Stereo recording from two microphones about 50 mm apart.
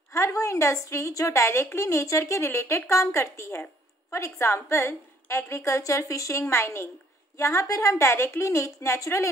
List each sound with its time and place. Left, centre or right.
0.1 s a woman's voice: left
2.4 s a woman's voice: left
7.3 s a woman's voice: left